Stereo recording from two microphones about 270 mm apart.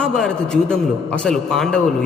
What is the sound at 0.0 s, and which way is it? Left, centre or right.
A man's voice, centre.